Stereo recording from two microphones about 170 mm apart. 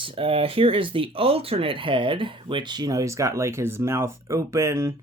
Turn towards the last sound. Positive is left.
turn(degrees=-15)  # may be behind; listen again after turning